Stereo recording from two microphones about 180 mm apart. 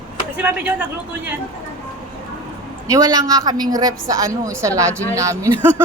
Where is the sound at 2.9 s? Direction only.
20° right (ahead or behind).